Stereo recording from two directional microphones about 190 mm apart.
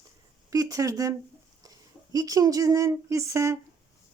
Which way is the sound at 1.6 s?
20° right (ahead or behind).